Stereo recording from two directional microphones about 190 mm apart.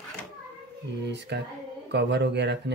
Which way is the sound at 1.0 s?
65° right (ahead or behind).